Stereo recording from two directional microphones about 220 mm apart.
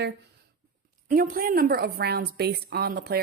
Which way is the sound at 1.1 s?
40° right (ahead or behind).